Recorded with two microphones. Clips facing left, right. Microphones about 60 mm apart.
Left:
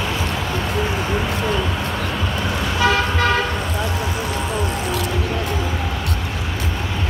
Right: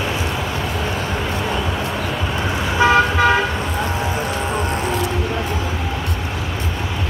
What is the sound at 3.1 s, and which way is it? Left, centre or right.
Toot, centre.